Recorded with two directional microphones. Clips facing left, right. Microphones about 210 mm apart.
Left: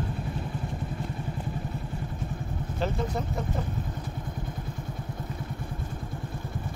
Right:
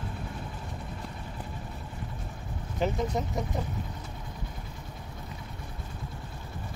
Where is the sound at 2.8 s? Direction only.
15° right (ahead or behind).